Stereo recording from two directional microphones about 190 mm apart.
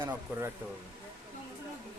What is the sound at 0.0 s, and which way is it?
Speech, 10° right (ahead or behind).